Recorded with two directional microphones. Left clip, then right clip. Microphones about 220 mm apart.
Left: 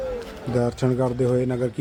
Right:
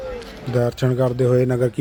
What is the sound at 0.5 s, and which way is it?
Speech, 5° right (ahead or behind).